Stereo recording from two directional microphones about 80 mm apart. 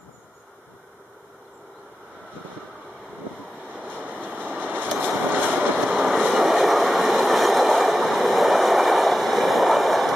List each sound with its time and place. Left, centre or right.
4.1 s vehicle: right
5.6 s train: centre